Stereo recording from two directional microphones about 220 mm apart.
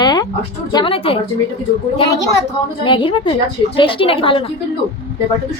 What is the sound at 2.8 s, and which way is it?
A woman's voice, 25° left (ahead or behind).